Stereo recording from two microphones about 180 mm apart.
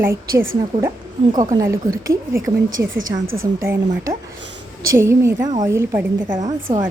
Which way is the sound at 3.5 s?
15° right (ahead or behind).